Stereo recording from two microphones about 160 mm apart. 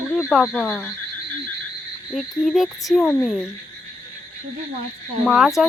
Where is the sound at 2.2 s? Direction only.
Centre (ahead or behind).